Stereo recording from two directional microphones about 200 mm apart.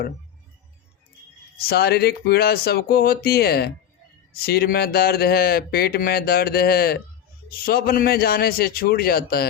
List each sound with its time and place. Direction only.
1.5 s speech: 55° left (ahead or behind)